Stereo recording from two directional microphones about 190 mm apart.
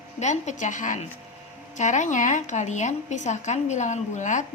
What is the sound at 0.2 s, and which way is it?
A woman's voice, 40° left (ahead or behind).